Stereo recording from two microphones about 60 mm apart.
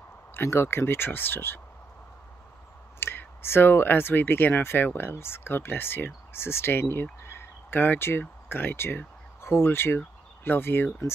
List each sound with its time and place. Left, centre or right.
0.3 s speech: left
3.0 s speech: left